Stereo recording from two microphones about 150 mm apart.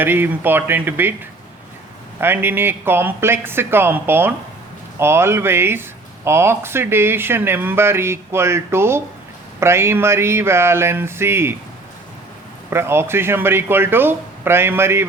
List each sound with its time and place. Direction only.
0.0 s speech: 15° right (ahead or behind)
2.2 s speech: 15° right (ahead or behind)
12.7 s speech: 15° right (ahead or behind)